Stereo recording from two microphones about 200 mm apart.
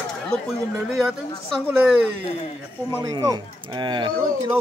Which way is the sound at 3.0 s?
20° right (ahead or behind).